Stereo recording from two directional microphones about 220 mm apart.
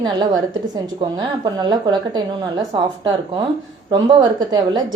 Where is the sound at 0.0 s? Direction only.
20° right (ahead or behind).